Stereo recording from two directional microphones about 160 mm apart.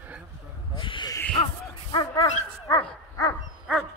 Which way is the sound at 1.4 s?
35° left (ahead or behind).